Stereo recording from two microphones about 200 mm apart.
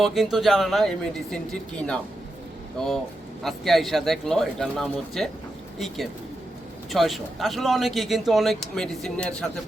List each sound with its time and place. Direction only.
0.0 s speech: centre (ahead or behind)
3.4 s speech: centre (ahead or behind)
6.9 s speech: centre (ahead or behind)